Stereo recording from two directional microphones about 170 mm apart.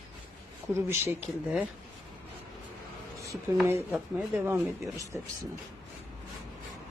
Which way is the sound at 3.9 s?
5° right (ahead or behind).